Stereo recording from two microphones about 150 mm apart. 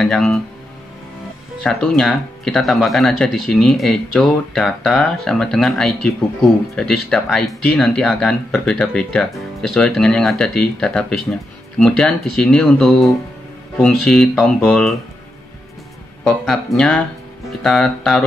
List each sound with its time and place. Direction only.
0.0 s speech: 5° left (ahead or behind)
1.6 s speech: 5° left (ahead or behind)
16.3 s speech: 5° left (ahead or behind)